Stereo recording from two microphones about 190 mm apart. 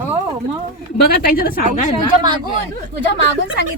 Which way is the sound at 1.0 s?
50° left (ahead or behind).